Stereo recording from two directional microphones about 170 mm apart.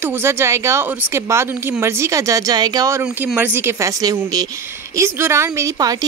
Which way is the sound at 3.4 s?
10° right (ahead or behind).